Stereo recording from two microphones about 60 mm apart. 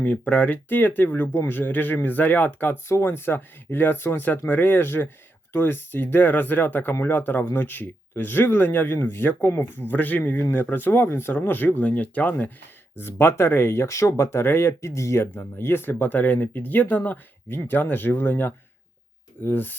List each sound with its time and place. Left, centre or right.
0.0 s speech: left
13.0 s speech: left
14.7 s speech: left